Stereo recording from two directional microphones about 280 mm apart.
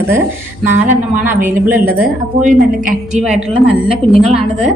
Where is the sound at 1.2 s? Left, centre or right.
Centre.